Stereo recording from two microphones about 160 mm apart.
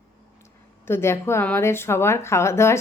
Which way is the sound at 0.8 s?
15° left (ahead or behind).